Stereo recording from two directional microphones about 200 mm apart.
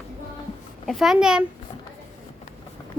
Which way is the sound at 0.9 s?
Centre (ahead or behind).